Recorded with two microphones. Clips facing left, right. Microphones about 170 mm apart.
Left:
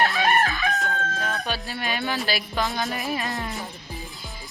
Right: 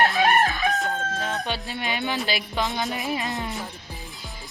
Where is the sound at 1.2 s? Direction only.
20° right (ahead or behind).